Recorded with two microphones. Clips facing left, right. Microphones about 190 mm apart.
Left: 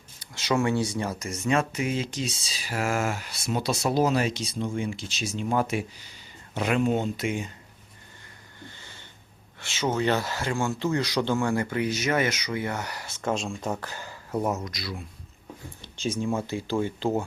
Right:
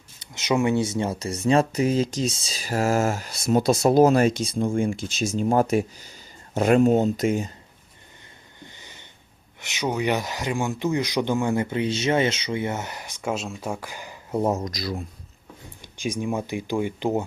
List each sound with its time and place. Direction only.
0.2 s speech: 20° right (ahead or behind); by 7.5 s 40° right (ahead or behind)
8.6 s wheeze: 15° right (ahead or behind)
9.6 s speech: 15° right (ahead or behind)
14.6 s speech: 40° right (ahead or behind)
15.8 s speech: 15° right (ahead or behind)